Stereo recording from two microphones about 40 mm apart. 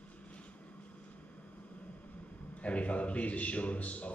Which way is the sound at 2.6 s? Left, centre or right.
Left.